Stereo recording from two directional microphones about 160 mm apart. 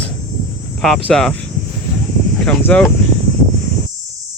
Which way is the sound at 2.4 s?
5° left (ahead or behind).